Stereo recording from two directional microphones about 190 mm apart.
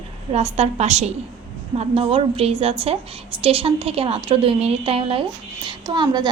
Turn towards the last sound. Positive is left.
turn(degrees=-25)  # may be behind; listen again after turning